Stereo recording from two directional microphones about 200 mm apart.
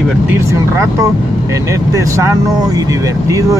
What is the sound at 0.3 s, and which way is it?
Speech, 15° right (ahead or behind).